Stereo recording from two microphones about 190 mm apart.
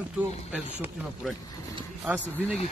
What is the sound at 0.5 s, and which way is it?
Speech, 5° right (ahead or behind).